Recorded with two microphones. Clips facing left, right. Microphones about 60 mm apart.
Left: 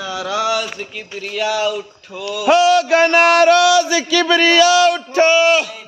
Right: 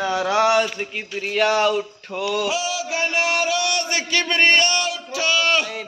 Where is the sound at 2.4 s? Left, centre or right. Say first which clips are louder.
Left 12 dB; left.